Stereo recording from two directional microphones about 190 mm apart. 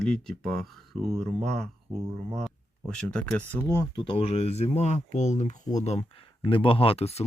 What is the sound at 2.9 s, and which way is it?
Speech, 5° left (ahead or behind).